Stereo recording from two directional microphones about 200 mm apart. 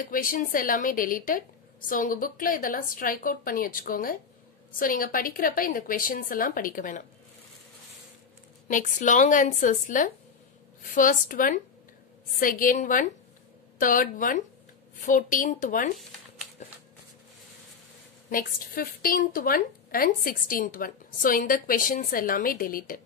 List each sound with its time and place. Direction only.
0.0 s a woman's voice: 45° left (ahead or behind)
8.6 s a woman's voice: 40° left (ahead or behind)
16.6 s shuffling cards: 35° left (ahead or behind)
18.3 s a woman's voice: 45° left (ahead or behind)